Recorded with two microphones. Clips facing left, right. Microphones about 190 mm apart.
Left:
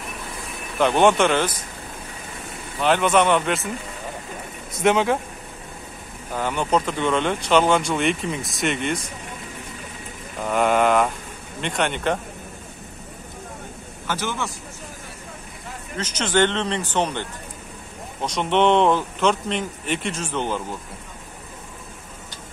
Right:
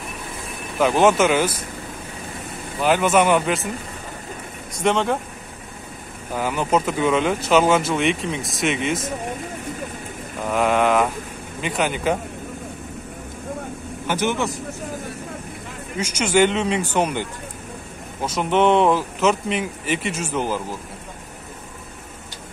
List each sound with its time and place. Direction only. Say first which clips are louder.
0.7 s speech: right 1 dB; 5° right (ahead or behind)
2.8 s speech: right 1 dB; 5° right (ahead or behind)
4.8 s speech: left 1 dB; centre (ahead or behind)
6.3 s speech: right 1 dB; 5° right (ahead or behind)
10.4 s speech: even; centre (ahead or behind)
14.0 s a man's voice: right 5 dB; 20° right (ahead or behind)
16.0 s a man's voice: right 3 dB; 10° right (ahead or behind)